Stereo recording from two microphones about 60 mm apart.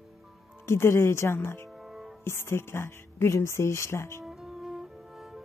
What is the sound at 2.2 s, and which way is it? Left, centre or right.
Speech, left.